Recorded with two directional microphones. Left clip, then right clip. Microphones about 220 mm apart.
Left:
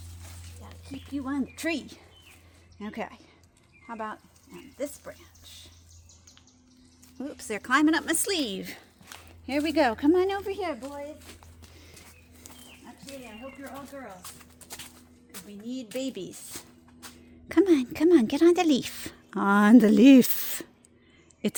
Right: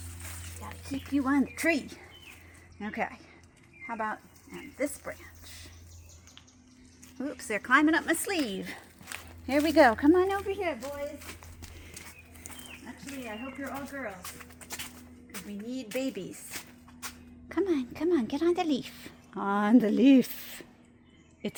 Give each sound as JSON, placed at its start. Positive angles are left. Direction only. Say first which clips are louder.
{"t": 0.9, "sound": "speech", "louder": "right 5 dB", "side_deg": 0}
{"t": 2.8, "sound": "speech", "louder": "right 3 dB", "side_deg": 35}
{"t": 7.2, "sound": "speech", "louder": "right 1 dB", "side_deg": 35}
{"t": 8.4, "sound": "speech", "louder": "left 2 dB", "side_deg": 25}
{"t": 9.5, "sound": "speech", "louder": "right 3 dB", "side_deg": 0}
{"t": 10.1, "sound": "speech", "louder": "even", "side_deg": 20}
{"t": 10.4, "sound": "speech", "louder": "even", "side_deg": 50}
{"t": 14.7, "sound": "music", "louder": "right 3 dB", "side_deg": 5}
{"t": 16.0, "sound": "speech", "louder": "even", "side_deg": 45}
{"t": 16.5, "sound": "a sound", "louder": "right 2 dB", "side_deg": 5}
{"t": 17.5, "sound": "a woman's voice", "louder": "left 7 dB", "side_deg": 55}